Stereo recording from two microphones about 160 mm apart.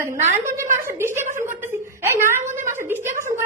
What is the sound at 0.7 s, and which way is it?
Speech, 15° right (ahead or behind).